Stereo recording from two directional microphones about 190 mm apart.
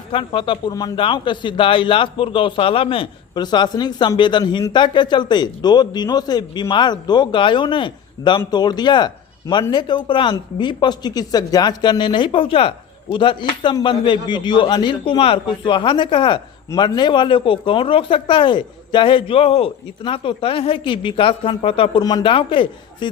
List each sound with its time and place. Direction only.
0.1 s a man's voice: 25° left (ahead or behind)